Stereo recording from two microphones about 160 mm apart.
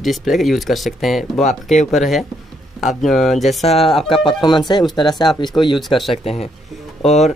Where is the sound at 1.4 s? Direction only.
50° left (ahead or behind).